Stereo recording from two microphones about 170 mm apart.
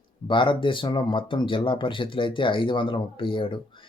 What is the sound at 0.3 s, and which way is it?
Speech, 30° left (ahead or behind).